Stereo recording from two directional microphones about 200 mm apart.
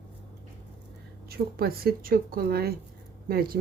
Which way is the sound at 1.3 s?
50° right (ahead or behind).